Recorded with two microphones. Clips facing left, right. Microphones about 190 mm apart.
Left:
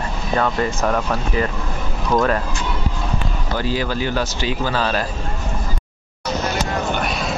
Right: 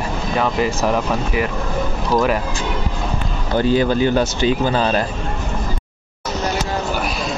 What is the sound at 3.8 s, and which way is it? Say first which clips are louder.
Speech: right 6 dB; 20° right (ahead or behind).